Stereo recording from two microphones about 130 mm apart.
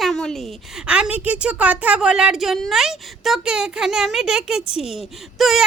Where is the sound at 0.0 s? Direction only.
5° left (ahead or behind).